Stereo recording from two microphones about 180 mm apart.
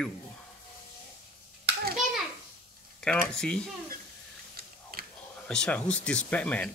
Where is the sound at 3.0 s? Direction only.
5° left (ahead or behind).